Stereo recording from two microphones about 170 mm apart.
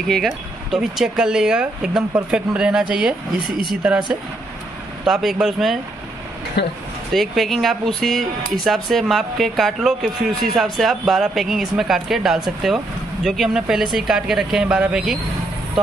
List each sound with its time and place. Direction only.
0.1 s speech: centre (ahead or behind)
6.6 s speech: 75° left (ahead or behind)
7.2 s speech: centre (ahead or behind)